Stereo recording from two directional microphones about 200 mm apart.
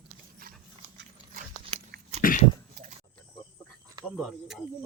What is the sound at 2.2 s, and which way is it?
Dog, 45° left (ahead or behind).